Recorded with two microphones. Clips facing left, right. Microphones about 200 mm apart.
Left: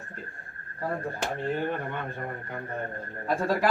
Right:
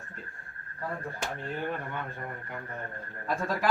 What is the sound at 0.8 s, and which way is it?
A man's voice, 35° left (ahead or behind).